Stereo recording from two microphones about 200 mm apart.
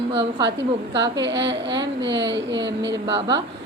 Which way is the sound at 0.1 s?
25° right (ahead or behind).